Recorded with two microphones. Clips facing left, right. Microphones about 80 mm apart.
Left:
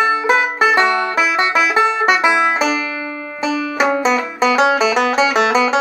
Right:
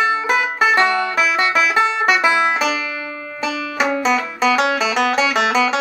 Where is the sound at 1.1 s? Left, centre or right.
Left.